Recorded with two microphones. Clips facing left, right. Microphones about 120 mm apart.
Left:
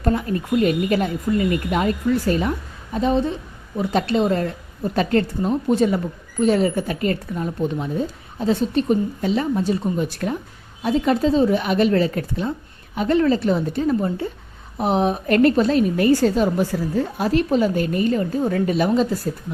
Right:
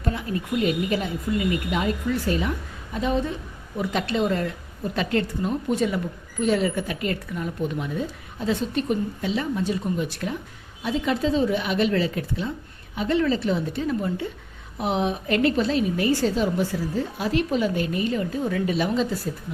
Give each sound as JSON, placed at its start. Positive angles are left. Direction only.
{"t": 0.0, "sound": "a woman's voice", "side_deg": 45}